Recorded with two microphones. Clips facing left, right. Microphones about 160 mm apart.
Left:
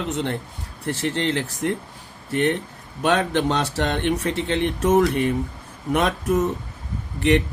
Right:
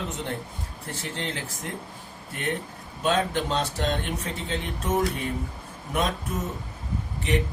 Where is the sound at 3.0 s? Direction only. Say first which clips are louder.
Left 5 dB; 75° left (ahead or behind).